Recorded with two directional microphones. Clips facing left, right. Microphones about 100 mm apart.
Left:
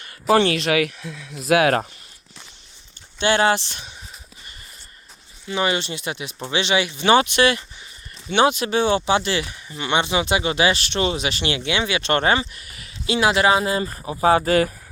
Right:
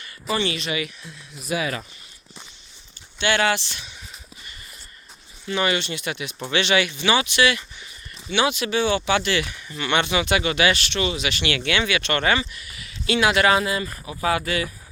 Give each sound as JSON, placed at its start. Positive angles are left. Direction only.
{"t": 0.3, "sound": "speech", "side_deg": 75}
{"t": 3.2, "sound": "speech", "side_deg": 35}
{"t": 5.5, "sound": "speech", "side_deg": 25}
{"t": 7.0, "sound": "speech", "side_deg": 45}
{"t": 10.9, "sound": "speech", "side_deg": 40}
{"t": 13.1, "sound": "speech", "side_deg": 30}